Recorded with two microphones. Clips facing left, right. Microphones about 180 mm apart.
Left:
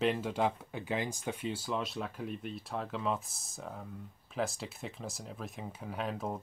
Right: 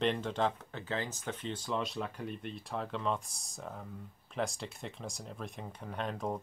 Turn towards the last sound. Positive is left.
turn(degrees=5)  # may be behind; listen again after turning